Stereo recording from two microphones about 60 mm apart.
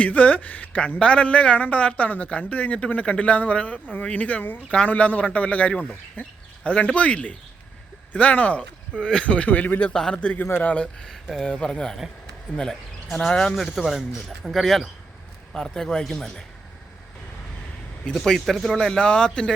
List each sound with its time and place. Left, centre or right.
0.0 s speech: left
9.9 s speech: centre
10.2 s speech: left
10.4 s speech: left
10.8 s speech: centre
13.7 s speech: centre
18.1 s speech: centre